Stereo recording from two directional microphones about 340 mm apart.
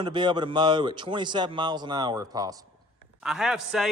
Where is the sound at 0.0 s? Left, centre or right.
Centre.